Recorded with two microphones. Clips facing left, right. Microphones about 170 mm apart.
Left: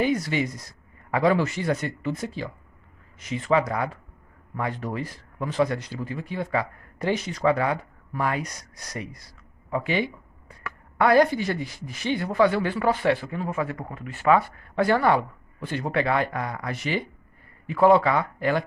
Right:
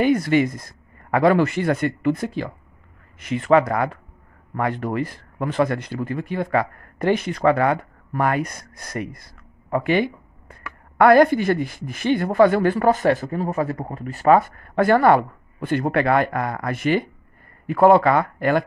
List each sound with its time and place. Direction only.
0.0 s speech: 55° right (ahead or behind)